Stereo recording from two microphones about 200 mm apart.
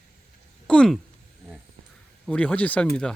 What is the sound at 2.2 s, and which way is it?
Speech, 5° left (ahead or behind).